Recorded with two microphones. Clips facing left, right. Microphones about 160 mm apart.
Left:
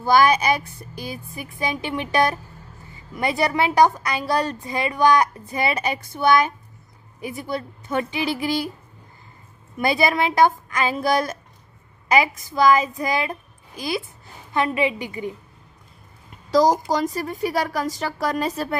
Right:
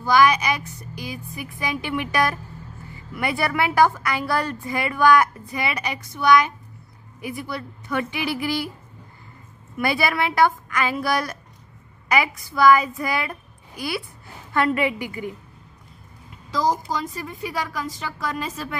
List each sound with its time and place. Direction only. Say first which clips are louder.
0.0 s a woman's voice: left 1 dB; 30° left (ahead or behind)
9.8 s a woman's voice: left 2 dB; 20° left (ahead or behind)
16.4 s a sound: left 6 dB; 90° left
16.7 s speech: left 6 dB; 40° left (ahead or behind)